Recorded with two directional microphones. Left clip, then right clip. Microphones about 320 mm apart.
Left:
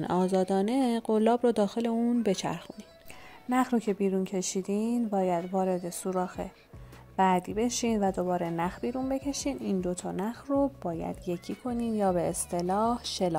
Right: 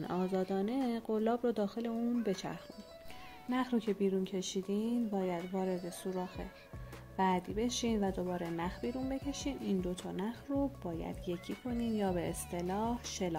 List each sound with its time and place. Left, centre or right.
0.0 s speech: left